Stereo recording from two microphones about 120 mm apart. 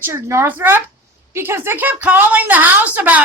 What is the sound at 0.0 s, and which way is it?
A woman's voice, 20° right (ahead or behind).